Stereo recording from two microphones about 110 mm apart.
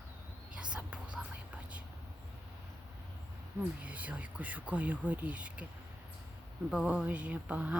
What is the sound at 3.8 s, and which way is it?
Speech, 15° right (ahead or behind).